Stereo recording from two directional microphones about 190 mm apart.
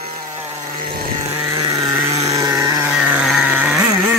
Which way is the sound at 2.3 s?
15° right (ahead or behind).